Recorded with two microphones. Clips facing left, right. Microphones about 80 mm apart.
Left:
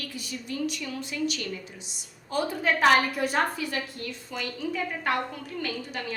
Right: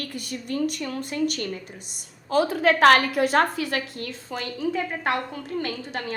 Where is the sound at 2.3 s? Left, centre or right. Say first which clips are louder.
Right 6 dB; right.